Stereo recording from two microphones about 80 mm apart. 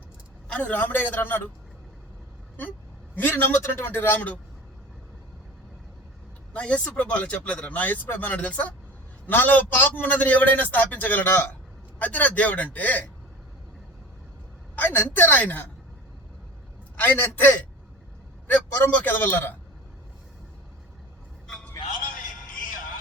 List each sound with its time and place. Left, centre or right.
0.4 s a man's voice: centre
3.2 s a man's voice: left
6.5 s a man's voice: centre
14.8 s a man's voice: left
17.0 s a man's voice: left
21.4 s a sound: centre